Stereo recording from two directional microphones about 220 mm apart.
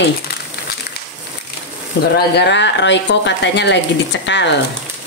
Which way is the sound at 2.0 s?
45° left (ahead or behind).